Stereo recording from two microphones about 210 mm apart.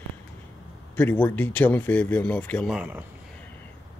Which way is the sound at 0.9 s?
10° left (ahead or behind).